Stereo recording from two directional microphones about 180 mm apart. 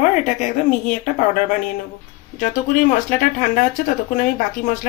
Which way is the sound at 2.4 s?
50° left (ahead or behind).